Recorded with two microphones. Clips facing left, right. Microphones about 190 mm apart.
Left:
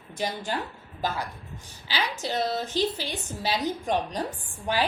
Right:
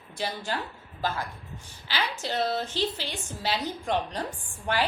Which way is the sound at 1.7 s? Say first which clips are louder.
Left 1 dB; 10° left (ahead or behind).